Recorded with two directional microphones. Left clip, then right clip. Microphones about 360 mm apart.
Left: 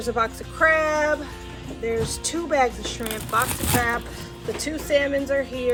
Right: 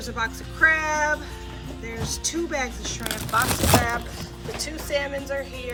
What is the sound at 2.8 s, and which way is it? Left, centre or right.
Speech, centre.